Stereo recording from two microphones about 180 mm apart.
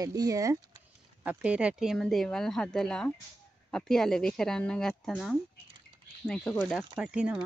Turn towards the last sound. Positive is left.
turn(degrees=-5)  # may be behind; listen again after turning